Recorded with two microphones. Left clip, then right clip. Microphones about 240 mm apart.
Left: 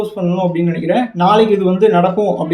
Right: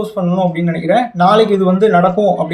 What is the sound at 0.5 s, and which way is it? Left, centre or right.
Speech, centre.